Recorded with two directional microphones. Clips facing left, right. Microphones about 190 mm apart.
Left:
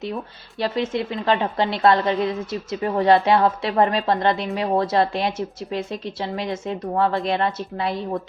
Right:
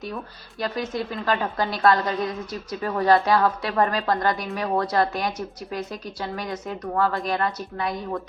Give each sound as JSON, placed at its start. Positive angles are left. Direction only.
{"t": 0.6, "sound": "a woman's voice", "side_deg": 25}